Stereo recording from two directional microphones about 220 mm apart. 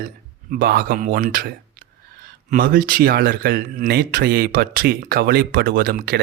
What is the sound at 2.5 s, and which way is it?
Speech, 40° right (ahead or behind).